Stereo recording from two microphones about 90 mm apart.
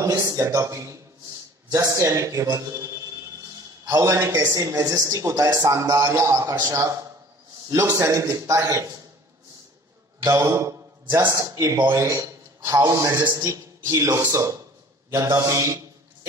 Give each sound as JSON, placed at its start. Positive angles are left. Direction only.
{"t": 0.0, "sound": "a man's voice", "side_deg": -40}
{"t": 10.2, "sound": "a man's voice", "side_deg": -35}